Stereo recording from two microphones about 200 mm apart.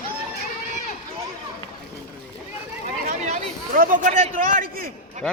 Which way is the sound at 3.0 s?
45° right (ahead or behind).